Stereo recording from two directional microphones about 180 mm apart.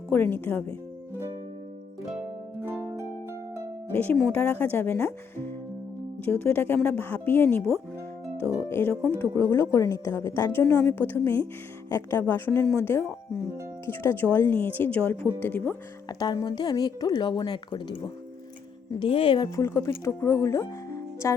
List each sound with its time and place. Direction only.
0.1 s a woman's voice: 10° left (ahead or behind)
2.6 s harp: 15° right (ahead or behind)
4.0 s a woman's voice: 10° left (ahead or behind)
8.7 s a woman's voice: 15° left (ahead or behind)
16.1 s a woman's voice: 20° left (ahead or behind)